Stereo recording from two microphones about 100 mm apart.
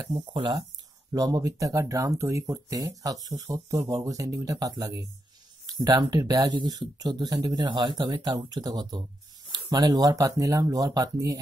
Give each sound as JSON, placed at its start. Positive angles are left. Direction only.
{"t": 0.0, "sound": "speech", "side_deg": -45}
{"t": 1.1, "sound": "speech", "side_deg": -35}